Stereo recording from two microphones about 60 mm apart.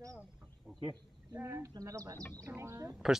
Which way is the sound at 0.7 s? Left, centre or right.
Centre.